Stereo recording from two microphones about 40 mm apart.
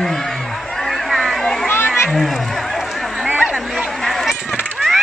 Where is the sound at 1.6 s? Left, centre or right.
Left.